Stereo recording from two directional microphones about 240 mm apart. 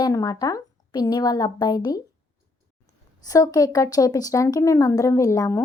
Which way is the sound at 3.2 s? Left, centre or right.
Centre.